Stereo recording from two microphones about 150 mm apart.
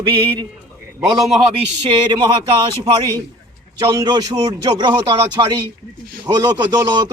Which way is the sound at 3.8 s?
25° right (ahead or behind).